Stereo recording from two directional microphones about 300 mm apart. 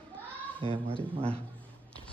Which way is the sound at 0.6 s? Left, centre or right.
Centre.